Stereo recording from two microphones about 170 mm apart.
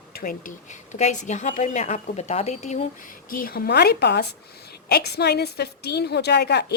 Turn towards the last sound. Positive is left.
turn(degrees=75)  # may be behind; listen again after turning